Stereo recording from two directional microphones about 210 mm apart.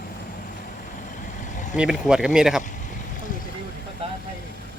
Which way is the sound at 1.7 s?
5° right (ahead or behind).